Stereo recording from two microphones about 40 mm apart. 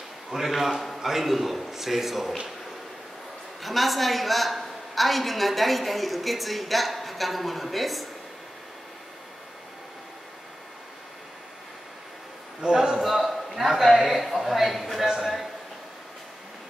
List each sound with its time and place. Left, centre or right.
0.5 s a woman's voice: centre
3.6 s a woman's voice: centre
12.6 s a man's voice: centre
13.0 s a man's voice: centre
15.0 s a sound: centre